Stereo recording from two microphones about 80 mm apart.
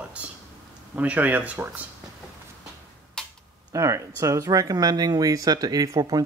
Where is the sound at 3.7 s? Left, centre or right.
Right.